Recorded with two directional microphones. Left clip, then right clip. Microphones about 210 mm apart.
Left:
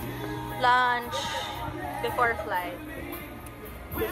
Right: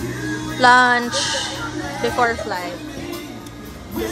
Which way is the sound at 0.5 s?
40° right (ahead or behind).